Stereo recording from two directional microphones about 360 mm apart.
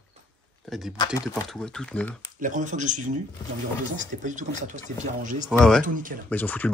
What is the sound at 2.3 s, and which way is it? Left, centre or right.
Speech, right.